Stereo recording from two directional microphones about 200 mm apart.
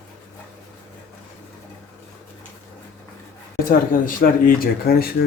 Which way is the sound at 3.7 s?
45° left (ahead or behind).